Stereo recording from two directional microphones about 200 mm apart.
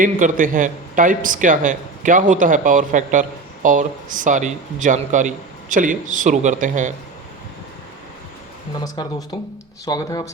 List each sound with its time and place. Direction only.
0.0 s speech: 40° right (ahead or behind)
8.8 s speech: 20° left (ahead or behind)